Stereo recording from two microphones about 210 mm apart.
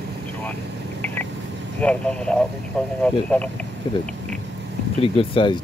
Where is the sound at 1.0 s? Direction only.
10° left (ahead or behind).